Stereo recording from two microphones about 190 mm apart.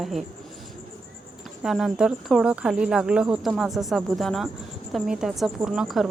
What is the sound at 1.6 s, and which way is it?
Speech, centre (ahead or behind).